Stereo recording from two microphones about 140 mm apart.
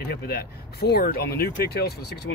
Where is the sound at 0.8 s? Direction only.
90° left.